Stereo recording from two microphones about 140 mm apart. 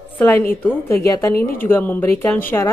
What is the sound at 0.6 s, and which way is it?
Speech, 15° left (ahead or behind).